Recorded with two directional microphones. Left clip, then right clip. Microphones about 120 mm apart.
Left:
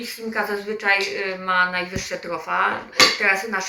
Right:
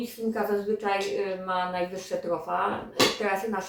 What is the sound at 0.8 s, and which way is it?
Speech, 35° right (ahead or behind).